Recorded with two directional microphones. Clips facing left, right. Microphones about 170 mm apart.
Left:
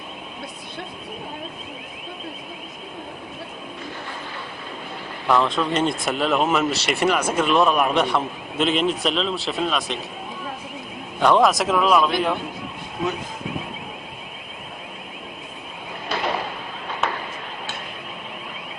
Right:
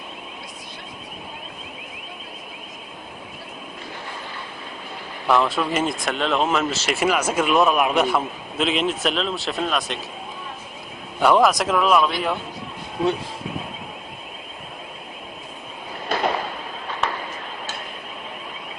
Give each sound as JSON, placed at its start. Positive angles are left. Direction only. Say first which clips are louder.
{"t": 5.3, "sound": "speech", "louder": "even", "side_deg": -5}
{"t": 11.2, "sound": "speech", "louder": "even", "side_deg": -5}
{"t": 16.1, "sound": "a sound", "louder": "right 3 dB", "side_deg": -50}